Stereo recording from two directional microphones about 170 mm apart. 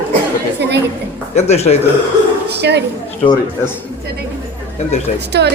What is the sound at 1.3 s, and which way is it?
Speech, 40° left (ahead or behind).